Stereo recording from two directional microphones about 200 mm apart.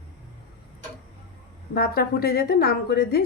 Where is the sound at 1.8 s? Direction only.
50° left (ahead or behind).